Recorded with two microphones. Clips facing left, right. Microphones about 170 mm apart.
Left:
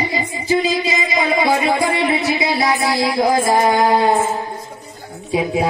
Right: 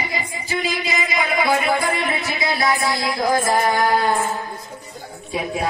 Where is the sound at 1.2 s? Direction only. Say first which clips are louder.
Left 3 dB; 25° left (ahead or behind).